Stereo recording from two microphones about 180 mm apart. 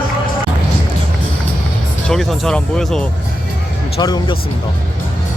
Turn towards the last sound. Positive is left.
turn(degrees=25)  # may be behind; listen again after turning